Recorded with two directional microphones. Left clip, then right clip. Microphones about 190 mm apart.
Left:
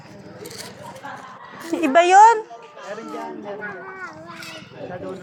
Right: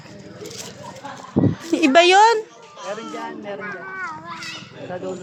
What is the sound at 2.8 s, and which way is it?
Speech, 5° right (ahead or behind).